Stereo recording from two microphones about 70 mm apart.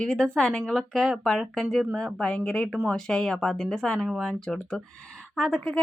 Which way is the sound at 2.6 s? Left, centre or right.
Centre.